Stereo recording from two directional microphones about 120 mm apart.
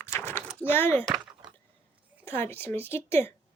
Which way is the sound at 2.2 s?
20° left (ahead or behind).